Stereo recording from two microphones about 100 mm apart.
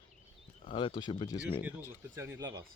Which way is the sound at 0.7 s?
55° left (ahead or behind).